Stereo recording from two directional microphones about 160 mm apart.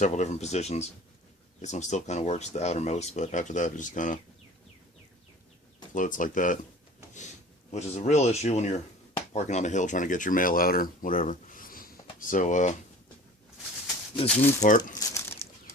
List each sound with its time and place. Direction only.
0.0 s speech: 45° left (ahead or behind)
5.9 s speech: 55° left (ahead or behind)
7.7 s speech: 45° left (ahead or behind)
14.6 s speech: 50° left (ahead or behind)
14.9 s bird flight: 15° left (ahead or behind)